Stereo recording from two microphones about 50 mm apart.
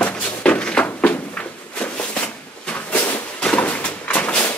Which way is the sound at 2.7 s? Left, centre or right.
Left.